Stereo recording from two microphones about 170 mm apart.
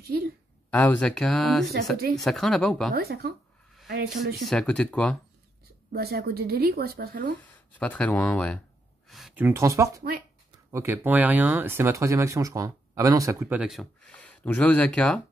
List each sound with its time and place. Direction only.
0.7 s speech: 10° left (ahead or behind)
2.9 s speech: 65° right (ahead or behind)
4.4 s speech: 5° left (ahead or behind)
5.9 s a woman's voice: 65° right (ahead or behind)
7.8 s speech: 10° left (ahead or behind)
9.4 s speech: 15° right (ahead or behind); by 15.1 s 5° left (ahead or behind)